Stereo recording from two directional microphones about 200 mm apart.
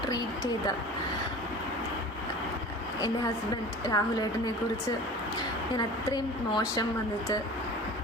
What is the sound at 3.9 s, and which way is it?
Speech, 20° left (ahead or behind).